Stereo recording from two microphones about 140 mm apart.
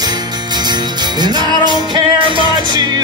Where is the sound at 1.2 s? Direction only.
30° right (ahead or behind).